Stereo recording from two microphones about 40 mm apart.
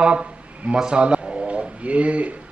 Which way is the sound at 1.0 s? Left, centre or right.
Right.